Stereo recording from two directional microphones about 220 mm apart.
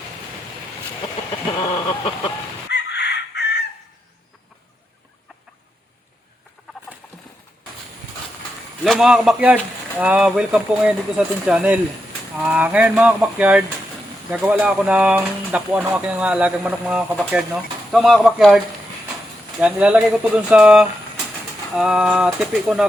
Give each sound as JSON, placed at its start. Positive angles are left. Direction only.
{"t": 2.6, "sound": "chicken", "side_deg": 50}
{"t": 6.6, "sound": "chicken", "side_deg": 0}
{"t": 8.8, "sound": "speech", "side_deg": 0}